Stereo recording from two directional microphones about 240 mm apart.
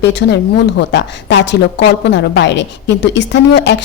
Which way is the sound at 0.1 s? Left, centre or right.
Left.